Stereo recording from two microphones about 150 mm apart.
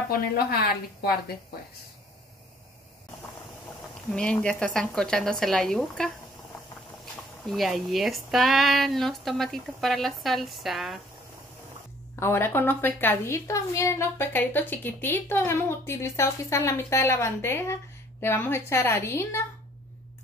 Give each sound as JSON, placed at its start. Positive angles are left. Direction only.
{"t": 0.1, "sound": "a woman's voice", "side_deg": 90}
{"t": 4.1, "sound": "speech", "side_deg": 5}
{"t": 7.4, "sound": "speech", "side_deg": 0}
{"t": 12.2, "sound": "a woman's voice", "side_deg": 15}